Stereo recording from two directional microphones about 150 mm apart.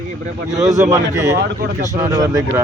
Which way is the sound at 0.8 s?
20° right (ahead or behind).